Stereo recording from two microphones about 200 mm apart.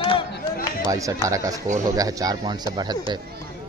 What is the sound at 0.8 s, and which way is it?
Speech, 15° right (ahead or behind).